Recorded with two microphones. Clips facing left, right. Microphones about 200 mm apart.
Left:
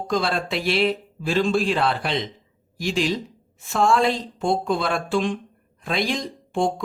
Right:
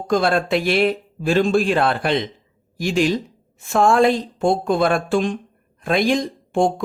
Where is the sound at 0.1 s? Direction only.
50° right (ahead or behind).